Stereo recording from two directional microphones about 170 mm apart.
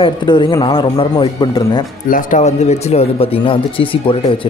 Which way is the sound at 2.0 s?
50° left (ahead or behind).